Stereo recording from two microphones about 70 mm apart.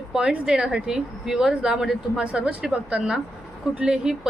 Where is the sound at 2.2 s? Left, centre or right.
Centre.